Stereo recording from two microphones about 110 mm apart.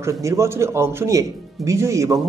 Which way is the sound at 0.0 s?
25° right (ahead or behind).